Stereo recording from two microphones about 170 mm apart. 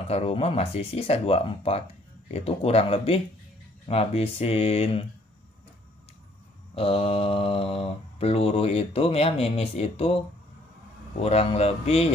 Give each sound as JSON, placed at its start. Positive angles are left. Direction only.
{"t": 0.1, "sound": "mantra", "side_deg": 35}
{"t": 6.7, "sound": "mantra", "side_deg": 35}
{"t": 11.1, "sound": "mantra", "side_deg": 35}